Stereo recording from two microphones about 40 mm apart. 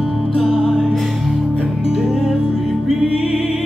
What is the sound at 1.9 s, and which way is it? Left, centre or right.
Music, centre.